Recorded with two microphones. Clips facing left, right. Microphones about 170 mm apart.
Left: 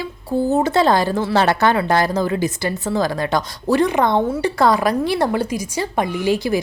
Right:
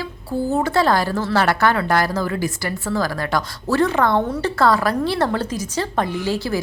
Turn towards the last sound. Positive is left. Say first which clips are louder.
# left 4 dB
turn(degrees=15)  # may be behind; listen again after turning